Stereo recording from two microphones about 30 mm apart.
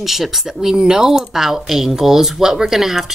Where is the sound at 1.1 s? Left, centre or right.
Centre.